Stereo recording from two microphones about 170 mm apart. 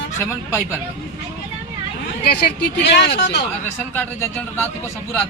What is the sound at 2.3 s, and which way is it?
Speech, 75° left (ahead or behind).